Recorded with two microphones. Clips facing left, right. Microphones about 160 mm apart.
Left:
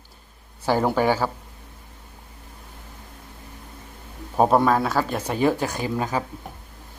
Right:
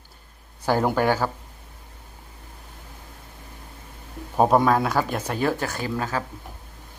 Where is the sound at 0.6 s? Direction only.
5° left (ahead or behind).